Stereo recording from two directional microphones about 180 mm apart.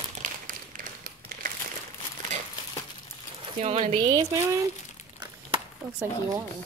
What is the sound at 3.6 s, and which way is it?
Speech, 35° right (ahead or behind).